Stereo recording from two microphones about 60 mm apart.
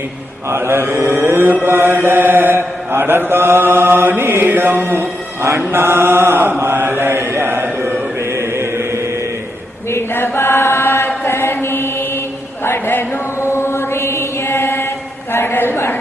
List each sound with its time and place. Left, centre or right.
0.5 s mantra: right
8.2 s chant: right
9.9 s chant: left
11.3 s mantra: left
12.6 s chant: left
15.3 s a sound: left